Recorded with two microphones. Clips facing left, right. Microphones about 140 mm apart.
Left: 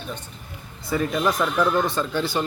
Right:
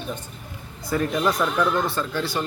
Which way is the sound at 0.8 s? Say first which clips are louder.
Even; centre (ahead or behind).